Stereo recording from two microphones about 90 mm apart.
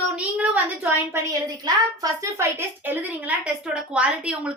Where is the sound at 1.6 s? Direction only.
55° right (ahead or behind).